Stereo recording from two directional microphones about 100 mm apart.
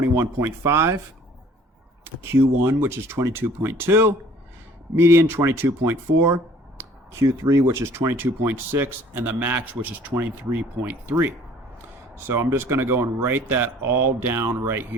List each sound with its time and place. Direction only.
0.0 s speech: 25° right (ahead or behind)
2.6 s speech: 25° right (ahead or behind)
12.1 s speech: 25° right (ahead or behind)